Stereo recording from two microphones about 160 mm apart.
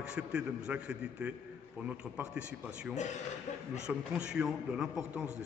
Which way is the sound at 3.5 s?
45° left (ahead or behind).